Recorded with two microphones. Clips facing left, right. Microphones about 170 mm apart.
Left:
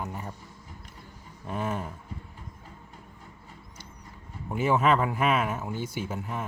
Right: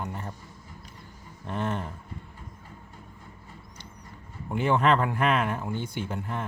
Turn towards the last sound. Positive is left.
turn(degrees=5)  # may be behind; listen again after turning